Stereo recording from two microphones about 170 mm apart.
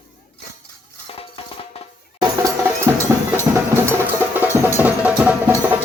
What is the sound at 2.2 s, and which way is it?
Music, 20° right (ahead or behind).